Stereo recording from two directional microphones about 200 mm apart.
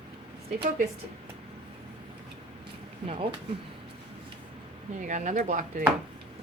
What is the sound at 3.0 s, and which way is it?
Speech, 25° right (ahead or behind).